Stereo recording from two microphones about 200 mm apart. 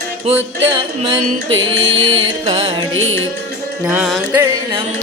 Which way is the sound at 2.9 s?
75° right (ahead or behind).